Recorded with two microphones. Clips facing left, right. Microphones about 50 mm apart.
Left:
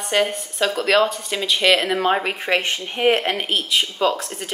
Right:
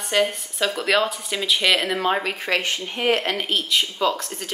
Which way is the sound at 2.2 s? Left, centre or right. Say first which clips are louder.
Left 2 dB; left.